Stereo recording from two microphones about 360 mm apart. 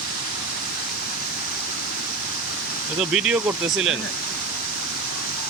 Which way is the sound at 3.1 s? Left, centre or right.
Centre.